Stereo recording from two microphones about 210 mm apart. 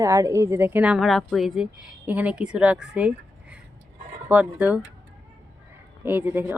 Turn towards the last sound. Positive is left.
turn(degrees=-10)  # may be behind; listen again after turning